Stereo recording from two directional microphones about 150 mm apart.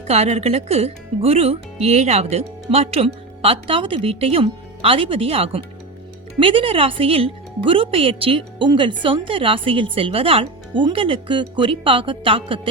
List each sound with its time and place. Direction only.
0.1 s a woman's voice: 45° right (ahead or behind)